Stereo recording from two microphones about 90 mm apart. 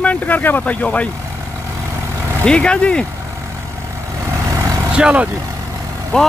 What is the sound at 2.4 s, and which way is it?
Speech, 10° left (ahead or behind).